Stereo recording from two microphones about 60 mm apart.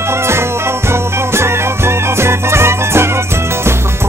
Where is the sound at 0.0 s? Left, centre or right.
Right.